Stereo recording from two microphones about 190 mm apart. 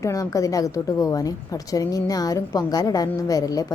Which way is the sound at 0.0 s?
15° left (ahead or behind).